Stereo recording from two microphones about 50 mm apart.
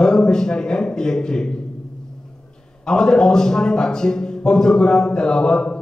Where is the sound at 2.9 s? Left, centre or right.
Centre.